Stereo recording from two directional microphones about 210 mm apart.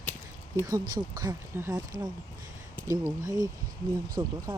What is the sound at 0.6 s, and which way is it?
Speech, 20° right (ahead or behind).